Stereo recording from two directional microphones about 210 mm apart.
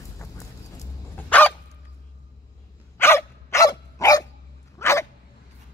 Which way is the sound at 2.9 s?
10° left (ahead or behind).